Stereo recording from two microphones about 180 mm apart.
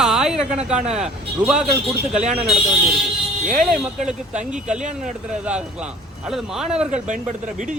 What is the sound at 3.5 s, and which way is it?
Speech, 5° right (ahead or behind).